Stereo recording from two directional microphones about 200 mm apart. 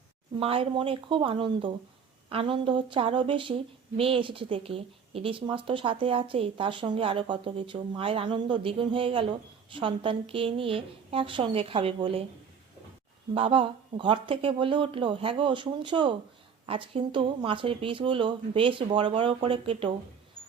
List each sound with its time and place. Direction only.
0.3 s speech: 25° right (ahead or behind)
13.3 s speech: 25° right (ahead or behind)